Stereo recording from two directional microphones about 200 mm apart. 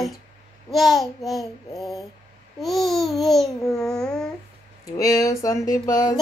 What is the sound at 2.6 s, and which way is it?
Babbling, centre (ahead or behind).